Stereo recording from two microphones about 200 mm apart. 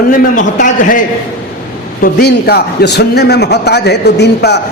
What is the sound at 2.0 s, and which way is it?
A man's voice, 50° left (ahead or behind).